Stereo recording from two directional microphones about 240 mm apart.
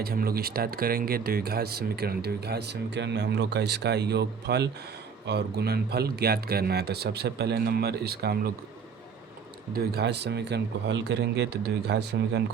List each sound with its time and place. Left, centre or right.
0.0 s speech: right
9.7 s speech: right